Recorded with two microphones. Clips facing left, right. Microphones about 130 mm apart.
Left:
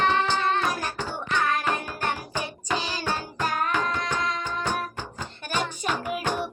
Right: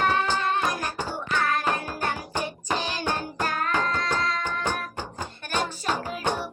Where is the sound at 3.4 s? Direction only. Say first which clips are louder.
Left 1 dB; 15° left (ahead or behind).